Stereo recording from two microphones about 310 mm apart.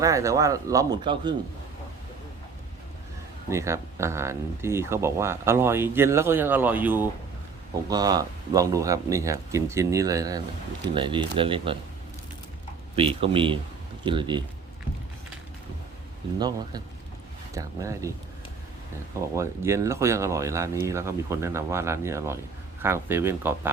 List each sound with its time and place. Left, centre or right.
0.0 s speech: centre
3.5 s speech: centre
13.0 s speech: centre
16.4 s speech: centre
19.4 s speech: centre